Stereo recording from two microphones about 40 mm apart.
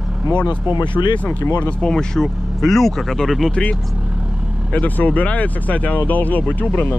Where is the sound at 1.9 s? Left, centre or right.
Centre.